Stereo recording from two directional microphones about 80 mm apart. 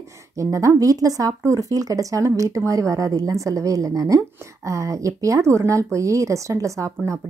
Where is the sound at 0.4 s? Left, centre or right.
Right.